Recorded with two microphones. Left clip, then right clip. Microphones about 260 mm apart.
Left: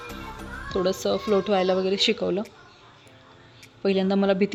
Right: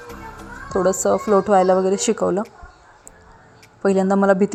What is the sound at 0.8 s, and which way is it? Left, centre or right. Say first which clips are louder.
Speech: right 7 dB; centre.